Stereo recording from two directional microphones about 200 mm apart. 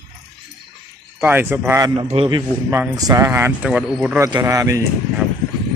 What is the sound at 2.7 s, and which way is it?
Speech, 15° right (ahead or behind).